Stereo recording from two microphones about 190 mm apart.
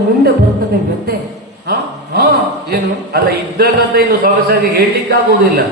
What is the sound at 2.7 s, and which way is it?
A man's voice, 55° right (ahead or behind).